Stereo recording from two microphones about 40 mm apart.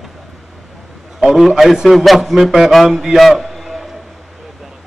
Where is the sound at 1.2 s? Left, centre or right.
Centre.